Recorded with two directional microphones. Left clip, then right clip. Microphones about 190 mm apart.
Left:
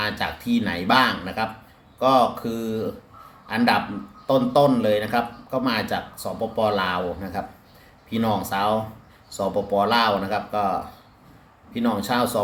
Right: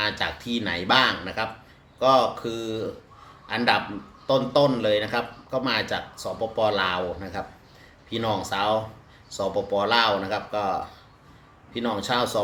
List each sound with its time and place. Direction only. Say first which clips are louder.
0.0 s a man's voice: even; 5° right (ahead or behind)